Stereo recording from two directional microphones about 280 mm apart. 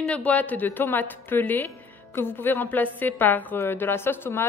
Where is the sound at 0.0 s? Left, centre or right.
Centre.